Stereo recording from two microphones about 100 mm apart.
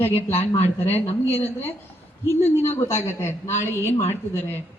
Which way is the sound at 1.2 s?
20° left (ahead or behind).